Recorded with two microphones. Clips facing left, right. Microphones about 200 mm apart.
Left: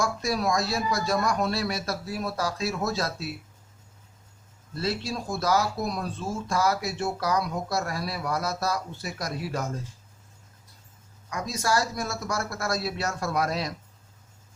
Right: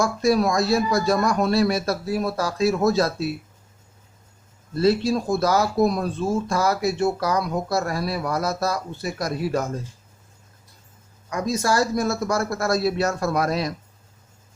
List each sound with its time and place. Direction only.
0.0 s a man's voice: 55° right (ahead or behind)
4.7 s a man's voice: 55° right (ahead or behind)
11.3 s a man's voice: 50° right (ahead or behind)